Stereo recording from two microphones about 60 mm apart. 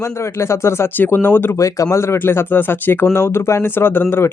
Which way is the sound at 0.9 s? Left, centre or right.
Left.